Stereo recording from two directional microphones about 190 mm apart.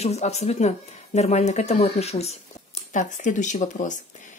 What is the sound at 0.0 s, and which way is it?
Speech, 35° left (ahead or behind).